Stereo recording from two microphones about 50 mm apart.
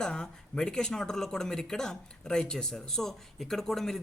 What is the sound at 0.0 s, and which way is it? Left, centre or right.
Speech, centre.